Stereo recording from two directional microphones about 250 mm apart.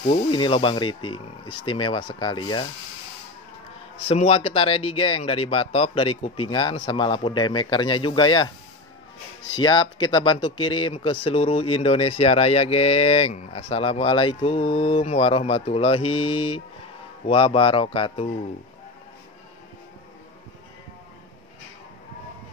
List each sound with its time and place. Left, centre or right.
0.0 s speech: left
4.1 s speech: left
9.5 s speech: centre